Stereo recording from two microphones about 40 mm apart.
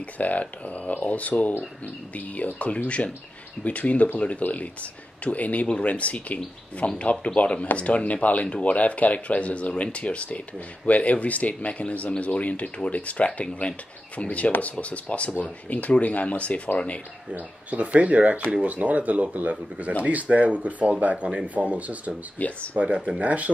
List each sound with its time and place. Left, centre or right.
0.0 s speech: left
17.3 s speech: right
22.4 s speech: left
22.8 s speech: right